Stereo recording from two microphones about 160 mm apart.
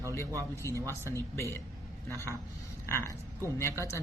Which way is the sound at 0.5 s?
20° left (ahead or behind).